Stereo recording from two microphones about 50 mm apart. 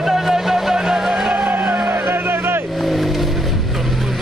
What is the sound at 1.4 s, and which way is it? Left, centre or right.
Vehicle, right.